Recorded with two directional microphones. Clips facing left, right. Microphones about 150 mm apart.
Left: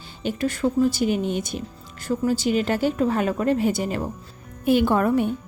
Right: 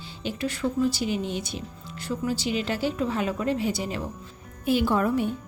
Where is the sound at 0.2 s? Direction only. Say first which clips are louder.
Left 5 dB; 50° left (ahead or behind).